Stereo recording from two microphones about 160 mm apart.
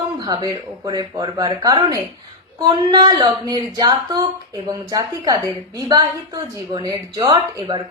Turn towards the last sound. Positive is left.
turn(degrees=-30)  # may be behind; listen again after turning